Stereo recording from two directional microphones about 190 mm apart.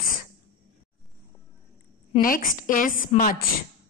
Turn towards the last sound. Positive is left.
turn(degrees=45)  # may be behind; listen again after turning